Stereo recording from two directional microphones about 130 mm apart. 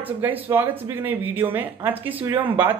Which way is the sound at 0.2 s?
15° right (ahead or behind).